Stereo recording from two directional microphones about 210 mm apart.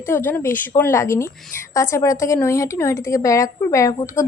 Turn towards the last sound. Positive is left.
turn(degrees=15)  # may be behind; listen again after turning